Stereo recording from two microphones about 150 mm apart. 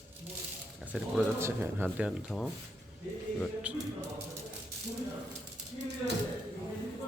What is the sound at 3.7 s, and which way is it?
Speech, 10° right (ahead or behind).